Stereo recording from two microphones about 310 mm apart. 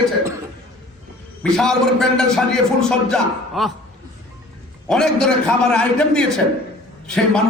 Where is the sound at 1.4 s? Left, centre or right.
Centre.